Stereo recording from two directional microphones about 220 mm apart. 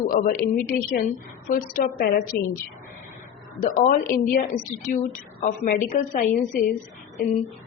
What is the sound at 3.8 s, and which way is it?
A woman's voice, 35° left (ahead or behind).